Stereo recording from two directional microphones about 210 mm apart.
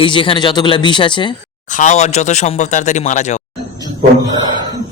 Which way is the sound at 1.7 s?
35° left (ahead or behind).